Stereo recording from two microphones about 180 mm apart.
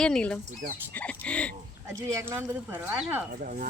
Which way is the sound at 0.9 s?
10° left (ahead or behind).